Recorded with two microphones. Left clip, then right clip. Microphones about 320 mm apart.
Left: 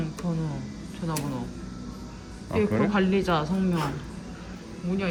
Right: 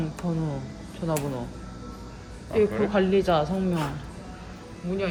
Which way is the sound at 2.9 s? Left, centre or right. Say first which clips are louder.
Right 3 dB; centre.